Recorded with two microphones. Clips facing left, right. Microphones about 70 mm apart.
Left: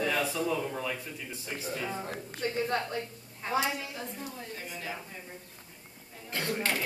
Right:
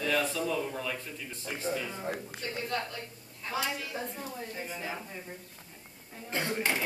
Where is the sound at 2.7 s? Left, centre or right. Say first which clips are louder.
Left 3 dB; left.